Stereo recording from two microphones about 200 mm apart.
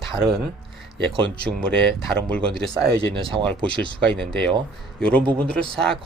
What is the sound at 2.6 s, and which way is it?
Speech, 5° left (ahead or behind).